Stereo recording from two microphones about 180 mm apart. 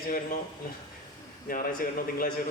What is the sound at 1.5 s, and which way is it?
Speech, 50° left (ahead or behind).